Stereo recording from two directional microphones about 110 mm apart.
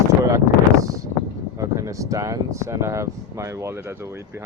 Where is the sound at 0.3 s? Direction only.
30° right (ahead or behind).